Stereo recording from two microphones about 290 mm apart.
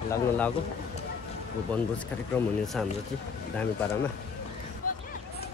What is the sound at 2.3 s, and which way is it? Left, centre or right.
Speech, centre.